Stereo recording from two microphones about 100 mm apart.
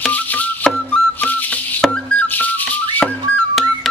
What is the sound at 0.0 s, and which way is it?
Music, 15° left (ahead or behind).